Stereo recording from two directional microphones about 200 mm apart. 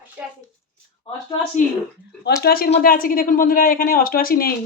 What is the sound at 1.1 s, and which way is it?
Speech, 25° left (ahead or behind).